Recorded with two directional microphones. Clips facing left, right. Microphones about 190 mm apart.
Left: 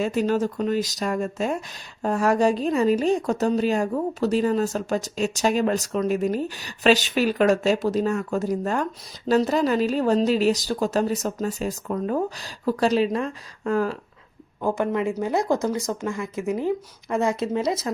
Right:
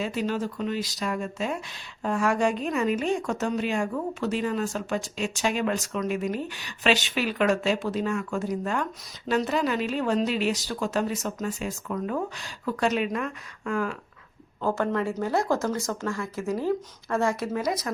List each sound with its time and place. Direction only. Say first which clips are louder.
0.0 s speech: left 6 dB; 45° left (ahead or behind)
14.6 s speech: left 3 dB; 15° left (ahead or behind)